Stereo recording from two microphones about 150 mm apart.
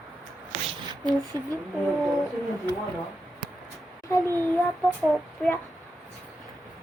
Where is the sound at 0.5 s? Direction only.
50° right (ahead or behind).